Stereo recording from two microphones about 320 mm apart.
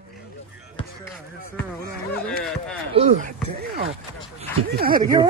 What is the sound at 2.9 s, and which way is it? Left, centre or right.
Speech, right.